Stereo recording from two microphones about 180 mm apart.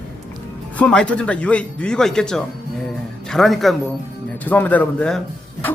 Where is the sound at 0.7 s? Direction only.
5° left (ahead or behind).